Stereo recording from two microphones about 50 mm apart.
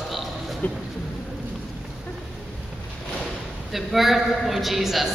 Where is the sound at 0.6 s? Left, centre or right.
Left.